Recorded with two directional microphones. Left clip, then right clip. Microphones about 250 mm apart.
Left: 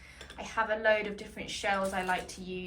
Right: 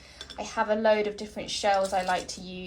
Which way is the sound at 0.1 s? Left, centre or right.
Right.